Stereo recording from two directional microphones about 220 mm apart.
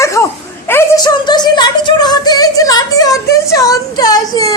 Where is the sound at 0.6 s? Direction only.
10° left (ahead or behind).